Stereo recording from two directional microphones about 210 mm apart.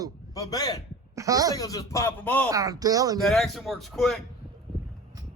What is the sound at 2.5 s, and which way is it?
Speech, 15° right (ahead or behind).